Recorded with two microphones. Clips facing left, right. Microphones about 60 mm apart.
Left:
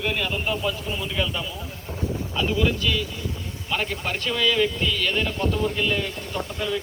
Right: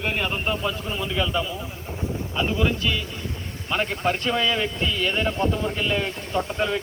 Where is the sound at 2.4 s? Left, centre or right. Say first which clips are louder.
Even; right.